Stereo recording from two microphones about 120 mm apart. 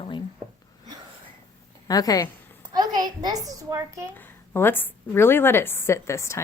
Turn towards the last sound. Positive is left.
turn(degrees=25)  # may be behind; listen again after turning